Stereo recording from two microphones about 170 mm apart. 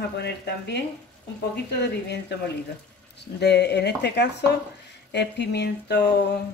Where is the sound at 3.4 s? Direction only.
75° left (ahead or behind).